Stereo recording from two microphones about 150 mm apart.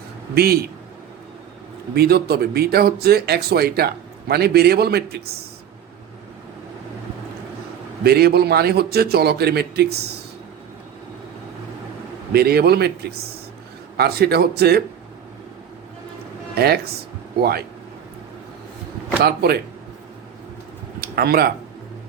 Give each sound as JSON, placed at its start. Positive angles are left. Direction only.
{"t": 0.3, "sound": "speech", "side_deg": -90}
{"t": 2.0, "sound": "speech", "side_deg": -90}
{"t": 8.0, "sound": "speech", "side_deg": -90}
{"t": 12.3, "sound": "speech", "side_deg": -90}
{"t": 16.6, "sound": "speech", "side_deg": -90}
{"t": 19.2, "sound": "speech", "side_deg": -90}
{"t": 21.0, "sound": "speech", "side_deg": -90}